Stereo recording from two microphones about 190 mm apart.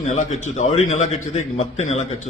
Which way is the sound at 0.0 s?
40° left (ahead or behind).